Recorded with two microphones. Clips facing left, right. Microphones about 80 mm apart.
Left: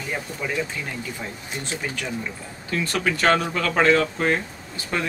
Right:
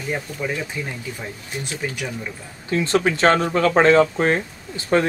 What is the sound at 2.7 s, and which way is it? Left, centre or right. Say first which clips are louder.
Speech: right 5 dB; right.